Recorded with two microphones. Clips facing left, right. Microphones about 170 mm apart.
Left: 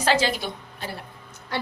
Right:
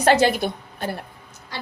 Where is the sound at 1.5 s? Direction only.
60° left (ahead or behind).